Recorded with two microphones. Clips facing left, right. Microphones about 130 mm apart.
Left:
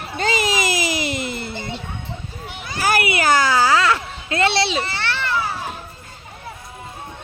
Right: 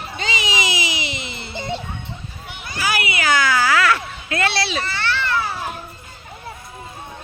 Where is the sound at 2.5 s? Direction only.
45° left (ahead or behind); by 5.4 s 15° left (ahead or behind).